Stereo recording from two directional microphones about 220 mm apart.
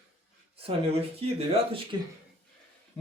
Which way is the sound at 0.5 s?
25° right (ahead or behind).